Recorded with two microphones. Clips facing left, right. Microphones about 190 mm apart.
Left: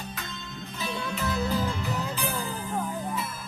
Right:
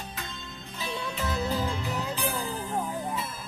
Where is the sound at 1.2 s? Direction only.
20° right (ahead or behind).